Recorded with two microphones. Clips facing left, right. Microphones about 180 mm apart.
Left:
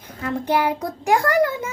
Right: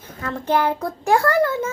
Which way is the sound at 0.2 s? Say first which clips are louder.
Even; 15° left (ahead or behind).